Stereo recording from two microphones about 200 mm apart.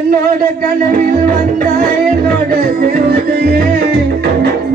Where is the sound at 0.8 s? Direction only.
45° right (ahead or behind).